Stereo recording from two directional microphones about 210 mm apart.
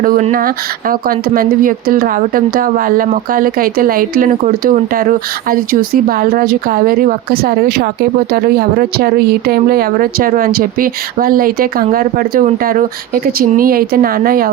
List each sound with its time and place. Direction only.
0.0 s speech: 40° right (ahead or behind)